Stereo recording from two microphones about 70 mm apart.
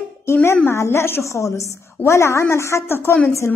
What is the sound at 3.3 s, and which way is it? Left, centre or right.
Speech, left.